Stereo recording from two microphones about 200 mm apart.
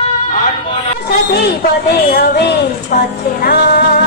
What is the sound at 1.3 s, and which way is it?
A woman's voice, 55° left (ahead or behind).